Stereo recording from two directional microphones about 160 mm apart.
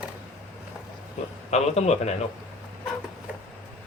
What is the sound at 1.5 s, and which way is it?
Speech, 45° left (ahead or behind).